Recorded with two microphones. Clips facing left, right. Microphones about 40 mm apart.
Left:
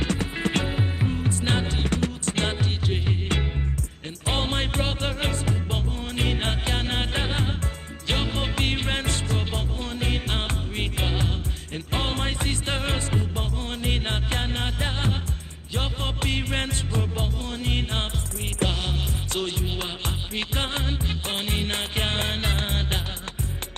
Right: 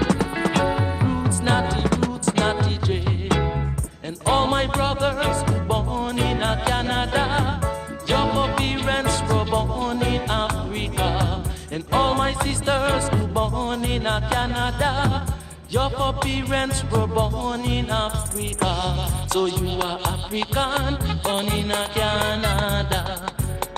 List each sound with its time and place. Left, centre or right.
0.2 s music: left
0.7 s music: centre
1.7 s music: left
4.3 s music: left
7.2 s music: centre
15.7 s music: left